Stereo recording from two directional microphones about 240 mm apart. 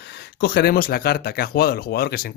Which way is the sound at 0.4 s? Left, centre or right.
Left.